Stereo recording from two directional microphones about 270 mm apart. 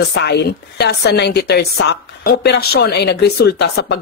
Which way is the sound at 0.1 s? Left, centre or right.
Left.